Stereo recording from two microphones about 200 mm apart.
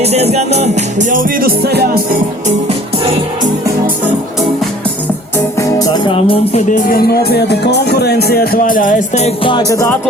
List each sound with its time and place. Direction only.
0.0 s music: 30° right (ahead or behind); by 1.9 s 55° right (ahead or behind)
5.5 s music: 15° left (ahead or behind)